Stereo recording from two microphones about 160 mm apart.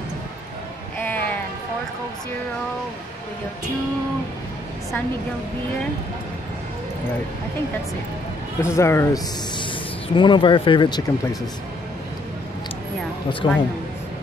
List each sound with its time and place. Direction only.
0.9 s music: 10° left (ahead or behind)
8.5 s speech: 15° left (ahead or behind)
9.6 s speech: 30° left (ahead or behind)
13.4 s speech: 30° left (ahead or behind)